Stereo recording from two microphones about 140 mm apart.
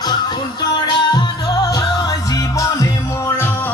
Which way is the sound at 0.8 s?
30° left (ahead or behind).